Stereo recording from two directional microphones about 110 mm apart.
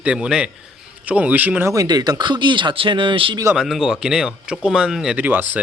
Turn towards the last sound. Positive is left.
turn(degrees=-15)  # may be behind; listen again after turning